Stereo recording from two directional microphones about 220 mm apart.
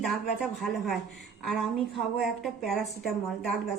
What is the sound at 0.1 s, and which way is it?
A woman's voice, centre (ahead or behind).